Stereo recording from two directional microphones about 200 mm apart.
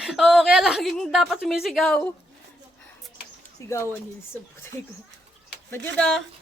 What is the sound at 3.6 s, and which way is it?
Speech, 15° left (ahead or behind).